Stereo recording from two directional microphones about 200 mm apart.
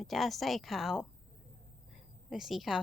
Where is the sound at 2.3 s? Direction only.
Centre (ahead or behind).